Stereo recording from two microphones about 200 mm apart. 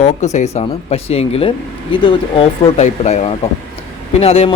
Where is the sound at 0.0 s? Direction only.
35° left (ahead or behind).